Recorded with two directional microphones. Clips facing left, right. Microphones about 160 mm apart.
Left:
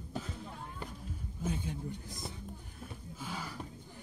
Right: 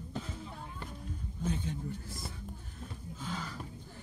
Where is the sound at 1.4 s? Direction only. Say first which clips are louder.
Right 1 dB; 10° left (ahead or behind).